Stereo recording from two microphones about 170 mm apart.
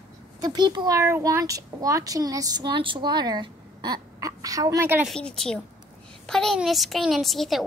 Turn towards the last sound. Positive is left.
turn(degrees=0)  # may be behind; listen again after turning